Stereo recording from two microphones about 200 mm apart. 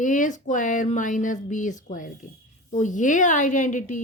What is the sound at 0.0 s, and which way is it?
A woman's voice, 40° left (ahead or behind).